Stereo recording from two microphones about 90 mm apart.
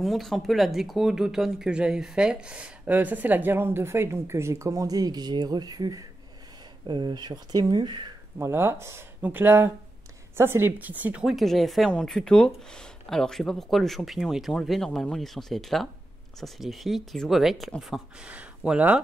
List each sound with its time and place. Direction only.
0.0 s speech: centre (ahead or behind); by 6.0 s 45° right (ahead or behind)
6.9 s speech: 55° right (ahead or behind)
8.4 s speech: 30° right (ahead or behind)
11.2 s speech: centre (ahead or behind)
18.3 s speech: 15° right (ahead or behind)